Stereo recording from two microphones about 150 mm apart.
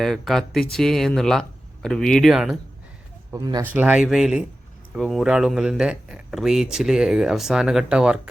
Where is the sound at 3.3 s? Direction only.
25° right (ahead or behind).